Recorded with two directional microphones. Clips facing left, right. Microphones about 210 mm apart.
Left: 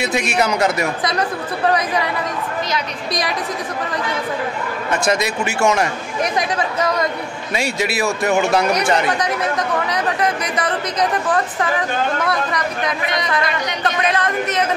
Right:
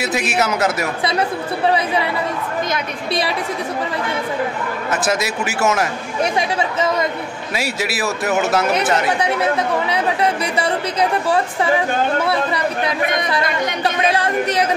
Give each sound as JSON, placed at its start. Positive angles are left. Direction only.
{"t": 0.0, "sound": "a man's voice", "side_deg": -5}
{"t": 1.7, "sound": "speech", "side_deg": -30}
{"t": 3.1, "sound": "speech", "side_deg": -30}
{"t": 4.9, "sound": "a man's voice", "side_deg": -5}
{"t": 7.5, "sound": "a man's voice", "side_deg": -5}
{"t": 10.4, "sound": "speech", "side_deg": -30}
{"t": 11.0, "sound": "a woman's voice", "side_deg": -10}
{"t": 13.0, "sound": "speech", "side_deg": -50}
{"t": 14.0, "sound": "speech", "side_deg": -30}